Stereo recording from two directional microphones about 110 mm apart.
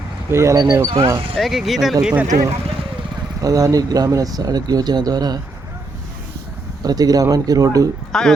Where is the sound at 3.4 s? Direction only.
30° right (ahead or behind).